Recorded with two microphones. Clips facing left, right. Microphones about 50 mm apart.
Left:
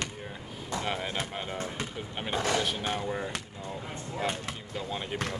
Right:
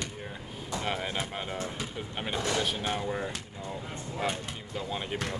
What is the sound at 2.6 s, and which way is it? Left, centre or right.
Speech, centre.